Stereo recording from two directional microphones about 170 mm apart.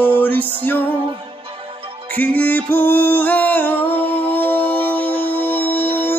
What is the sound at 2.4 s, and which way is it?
Music, 10° left (ahead or behind).